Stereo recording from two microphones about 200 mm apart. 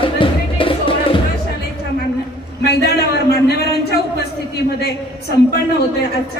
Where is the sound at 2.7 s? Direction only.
55° left (ahead or behind).